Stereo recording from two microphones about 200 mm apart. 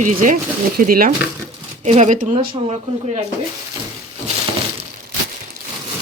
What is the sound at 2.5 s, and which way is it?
Speech, 30° right (ahead or behind).